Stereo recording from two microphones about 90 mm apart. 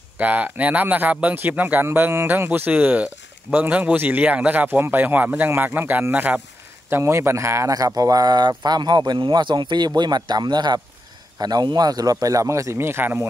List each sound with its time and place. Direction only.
0.2 s speech: 15° right (ahead or behind)
6.9 s a man's voice: 30° right (ahead or behind)